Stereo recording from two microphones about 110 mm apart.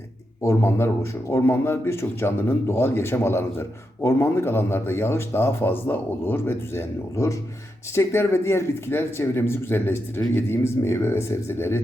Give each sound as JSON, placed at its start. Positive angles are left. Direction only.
{"t": 0.4, "sound": "a man's voice", "side_deg": 25}